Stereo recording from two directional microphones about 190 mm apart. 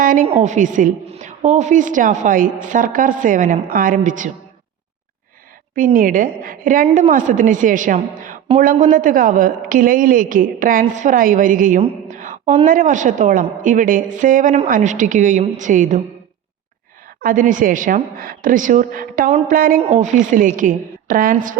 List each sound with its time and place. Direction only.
0.0 s a sound: 45° right (ahead or behind)
0.3 s a woman's voice: 35° right (ahead or behind)
5.7 s a woman's voice: 45° right (ahead or behind)
6.8 s a woman's voice: 30° right (ahead or behind)
7.1 s a woman's voice: 45° right (ahead or behind)
17.2 s a woman's voice: 45° right (ahead or behind)
19.3 s a woman's voice: 35° right (ahead or behind)
19.5 s a woman's voice: 50° right (ahead or behind)
19.8 s a woman's voice: 40° right (ahead or behind)